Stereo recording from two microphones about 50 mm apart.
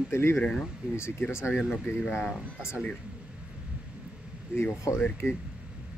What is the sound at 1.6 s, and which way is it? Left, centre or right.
Speech, centre.